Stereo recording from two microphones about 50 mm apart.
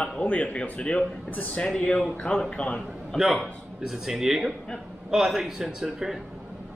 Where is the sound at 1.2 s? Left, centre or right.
Left.